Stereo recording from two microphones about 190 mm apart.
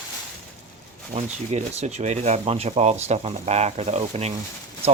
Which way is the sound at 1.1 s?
35° right (ahead or behind).